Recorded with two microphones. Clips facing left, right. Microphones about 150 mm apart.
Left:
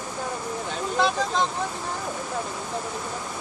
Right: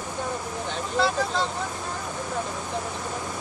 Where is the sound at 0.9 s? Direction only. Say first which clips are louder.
Even; 15° left (ahead or behind).